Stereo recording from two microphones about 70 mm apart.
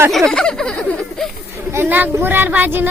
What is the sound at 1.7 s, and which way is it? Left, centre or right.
A woman's voice, right.